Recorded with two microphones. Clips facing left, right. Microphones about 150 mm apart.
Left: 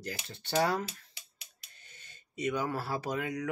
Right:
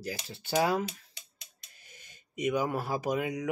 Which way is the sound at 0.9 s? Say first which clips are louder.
Right 4 dB; 5° left (ahead or behind).